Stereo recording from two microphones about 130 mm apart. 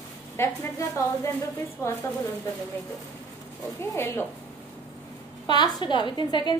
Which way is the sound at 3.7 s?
20° left (ahead or behind).